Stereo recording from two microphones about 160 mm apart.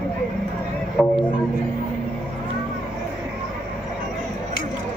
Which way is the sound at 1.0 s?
20° left (ahead or behind).